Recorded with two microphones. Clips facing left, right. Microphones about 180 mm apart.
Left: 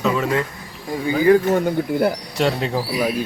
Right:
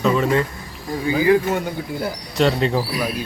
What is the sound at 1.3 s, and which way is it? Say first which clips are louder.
Speech: left 4 dB; 45° left (ahead or behind).